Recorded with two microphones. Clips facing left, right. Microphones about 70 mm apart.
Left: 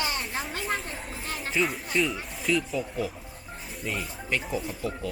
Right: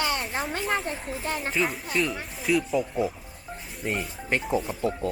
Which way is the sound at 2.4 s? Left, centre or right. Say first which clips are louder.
Right 3 dB; centre.